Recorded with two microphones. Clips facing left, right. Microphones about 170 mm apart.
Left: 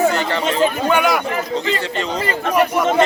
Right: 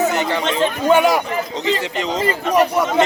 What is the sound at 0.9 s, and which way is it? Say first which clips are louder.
Speech: right 7 dB; 30° right (ahead or behind).